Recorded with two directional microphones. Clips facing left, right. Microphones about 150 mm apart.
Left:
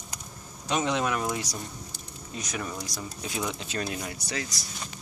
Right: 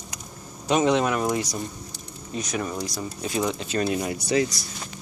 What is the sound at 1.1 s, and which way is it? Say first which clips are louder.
Speech: right 5 dB; 15° right (ahead or behind).